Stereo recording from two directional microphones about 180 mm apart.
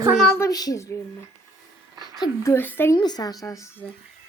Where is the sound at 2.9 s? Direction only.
20° left (ahead or behind).